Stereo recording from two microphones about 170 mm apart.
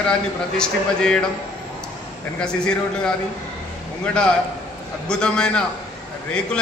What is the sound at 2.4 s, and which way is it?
Speech, 5° left (ahead or behind).